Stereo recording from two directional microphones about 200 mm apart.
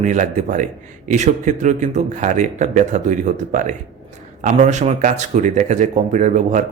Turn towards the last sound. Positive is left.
turn(degrees=-40)  # may be behind; listen again after turning